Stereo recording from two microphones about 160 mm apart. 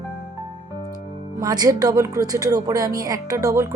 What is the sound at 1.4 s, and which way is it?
Speech, 25° right (ahead or behind).